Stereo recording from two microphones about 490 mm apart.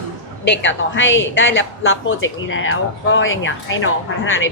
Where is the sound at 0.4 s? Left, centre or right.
Left.